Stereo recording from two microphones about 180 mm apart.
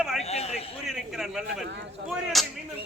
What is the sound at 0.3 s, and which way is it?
Speech, 35° left (ahead or behind).